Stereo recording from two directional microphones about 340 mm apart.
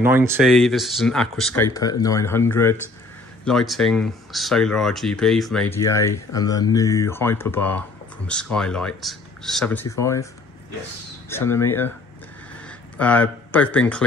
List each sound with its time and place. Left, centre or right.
0.0 s speech: centre
11.2 s speech: centre